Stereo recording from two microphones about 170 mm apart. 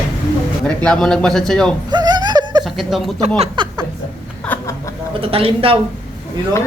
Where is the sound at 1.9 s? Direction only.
25° right (ahead or behind).